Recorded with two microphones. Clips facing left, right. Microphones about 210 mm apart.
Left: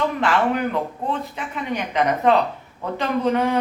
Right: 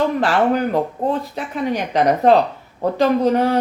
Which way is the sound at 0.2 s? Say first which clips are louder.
Right 3 dB; 35° right (ahead or behind).